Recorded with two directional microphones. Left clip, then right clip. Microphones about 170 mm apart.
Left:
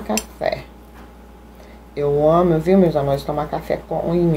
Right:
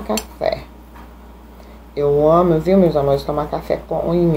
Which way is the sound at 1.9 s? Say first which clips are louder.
Right 2 dB; centre (ahead or behind).